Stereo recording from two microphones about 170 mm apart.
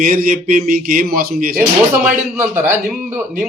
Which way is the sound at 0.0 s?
50° right (ahead or behind).